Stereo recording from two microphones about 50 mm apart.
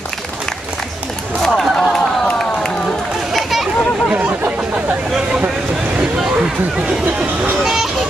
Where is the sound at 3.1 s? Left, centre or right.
Centre.